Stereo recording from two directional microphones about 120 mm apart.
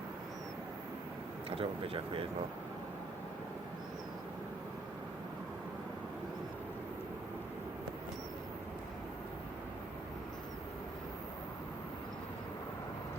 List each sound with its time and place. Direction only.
1.5 s speech: 50° right (ahead or behind)